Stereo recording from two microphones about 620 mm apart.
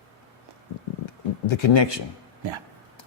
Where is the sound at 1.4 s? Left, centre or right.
Left.